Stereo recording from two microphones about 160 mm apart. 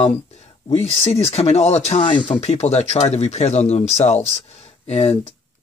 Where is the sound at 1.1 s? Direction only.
40° left (ahead or behind).